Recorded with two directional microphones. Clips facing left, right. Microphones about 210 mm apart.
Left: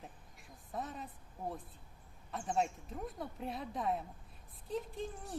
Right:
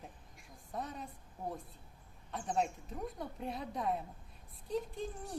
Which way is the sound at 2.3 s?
Centre (ahead or behind).